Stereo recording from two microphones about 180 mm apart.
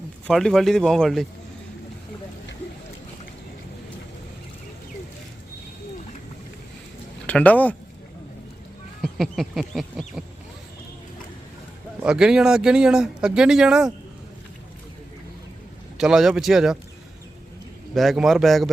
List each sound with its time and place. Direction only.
0.3 s speech: centre (ahead or behind)
7.3 s speech: 10° left (ahead or behind)
9.0 s speech: centre (ahead or behind)
12.0 s speech: 5° right (ahead or behind)
16.0 s speech: 5° right (ahead or behind)
17.9 s speech: centre (ahead or behind)